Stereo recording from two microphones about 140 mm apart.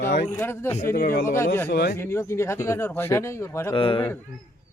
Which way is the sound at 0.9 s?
85° left.